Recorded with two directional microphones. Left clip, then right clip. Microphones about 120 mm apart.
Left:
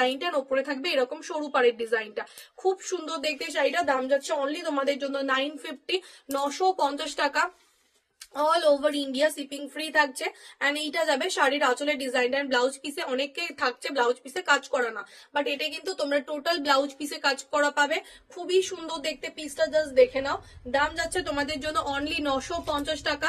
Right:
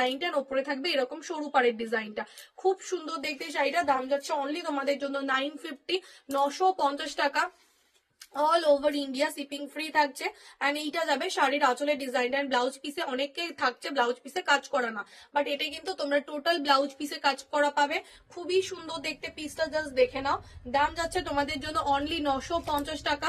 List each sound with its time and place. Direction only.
0.0 s a woman's voice: 30° left (ahead or behind)